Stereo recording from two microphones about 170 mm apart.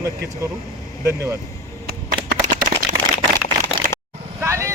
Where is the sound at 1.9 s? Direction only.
45° right (ahead or behind).